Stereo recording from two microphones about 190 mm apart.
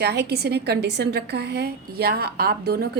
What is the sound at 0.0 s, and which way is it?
A woman's voice, 60° right (ahead or behind).